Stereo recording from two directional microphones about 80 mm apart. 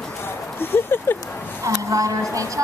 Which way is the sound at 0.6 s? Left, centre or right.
Left.